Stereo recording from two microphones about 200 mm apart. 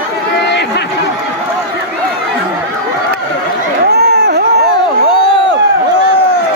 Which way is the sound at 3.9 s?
55° right (ahead or behind).